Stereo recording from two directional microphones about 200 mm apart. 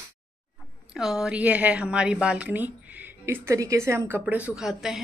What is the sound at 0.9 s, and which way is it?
A woman's voice, 5° right (ahead or behind).